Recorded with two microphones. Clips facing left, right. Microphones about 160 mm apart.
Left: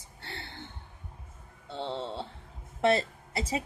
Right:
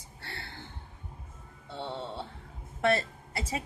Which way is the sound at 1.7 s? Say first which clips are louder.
Left 2 dB; 25° left (ahead or behind).